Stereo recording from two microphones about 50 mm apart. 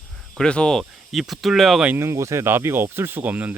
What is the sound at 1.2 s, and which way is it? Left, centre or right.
Speech, centre.